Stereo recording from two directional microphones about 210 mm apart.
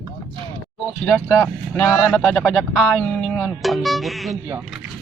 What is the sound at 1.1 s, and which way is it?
Speech, 5° left (ahead or behind).